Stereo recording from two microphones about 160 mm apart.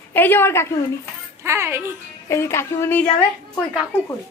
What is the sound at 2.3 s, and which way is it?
Speech, 15° left (ahead or behind).